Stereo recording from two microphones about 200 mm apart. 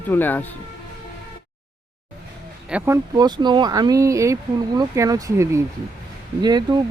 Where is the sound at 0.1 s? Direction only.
10° left (ahead or behind).